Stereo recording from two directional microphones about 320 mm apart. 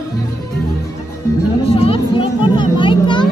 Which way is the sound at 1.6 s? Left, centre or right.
Centre.